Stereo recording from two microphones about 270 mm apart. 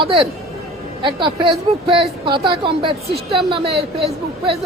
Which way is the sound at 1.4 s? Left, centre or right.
Centre.